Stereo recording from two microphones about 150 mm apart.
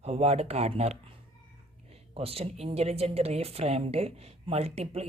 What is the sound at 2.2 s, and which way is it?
Speech, 40° right (ahead or behind).